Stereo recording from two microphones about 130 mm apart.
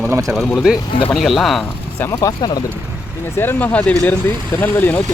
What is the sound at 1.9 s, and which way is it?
Speech, 20° left (ahead or behind).